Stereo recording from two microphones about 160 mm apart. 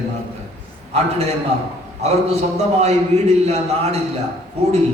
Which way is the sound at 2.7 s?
45° right (ahead or behind).